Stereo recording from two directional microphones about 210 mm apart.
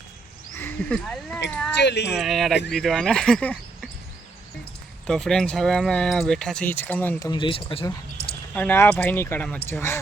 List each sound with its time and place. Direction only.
0.5 s speech: 5° left (ahead or behind)
1.7 s speech: 55° left (ahead or behind)
2.1 s speech: centre (ahead or behind)
5.0 s speech: centre (ahead or behind); by 7.9 s 25° left (ahead or behind)
8.2 s a sound: 45° left (ahead or behind)
8.5 s speech: 10° left (ahead or behind)